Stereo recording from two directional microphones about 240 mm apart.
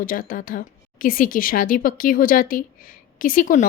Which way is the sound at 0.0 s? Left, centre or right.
Left.